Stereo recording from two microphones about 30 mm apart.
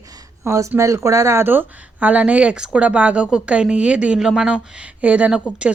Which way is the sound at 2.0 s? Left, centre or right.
Right.